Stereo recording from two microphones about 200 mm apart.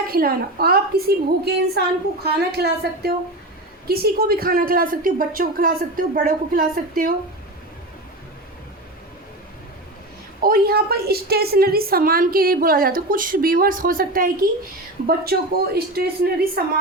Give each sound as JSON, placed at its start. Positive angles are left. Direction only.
{"t": 0.1, "sound": "a woman's voice", "side_deg": -50}
{"t": 10.4, "sound": "a woman's voice", "side_deg": -50}